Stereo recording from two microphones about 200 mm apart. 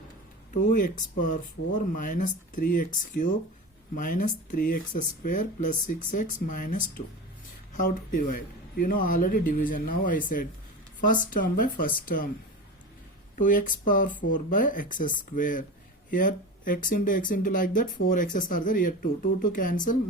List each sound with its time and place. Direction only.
0.5 s speech: 40° left (ahead or behind)
13.3 s speech: 45° left (ahead or behind)